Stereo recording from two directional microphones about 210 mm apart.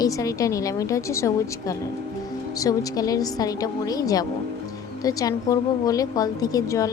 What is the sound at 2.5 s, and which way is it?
A woman's voice, 15° left (ahead or behind).